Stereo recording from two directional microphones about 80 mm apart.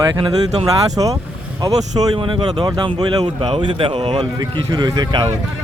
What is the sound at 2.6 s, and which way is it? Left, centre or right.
Speech, right.